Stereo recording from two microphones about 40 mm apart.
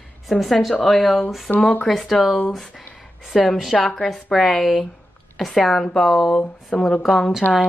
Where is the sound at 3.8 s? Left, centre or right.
Centre.